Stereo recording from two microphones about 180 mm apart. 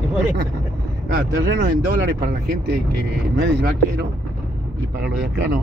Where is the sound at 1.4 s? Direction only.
85° right.